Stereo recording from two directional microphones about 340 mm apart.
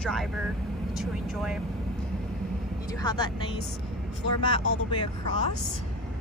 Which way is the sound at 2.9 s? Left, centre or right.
Centre.